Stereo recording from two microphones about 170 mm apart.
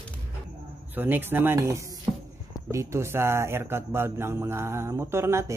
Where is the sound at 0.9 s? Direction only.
10° right (ahead or behind).